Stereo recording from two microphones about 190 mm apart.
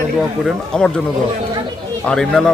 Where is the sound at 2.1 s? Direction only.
5° left (ahead or behind).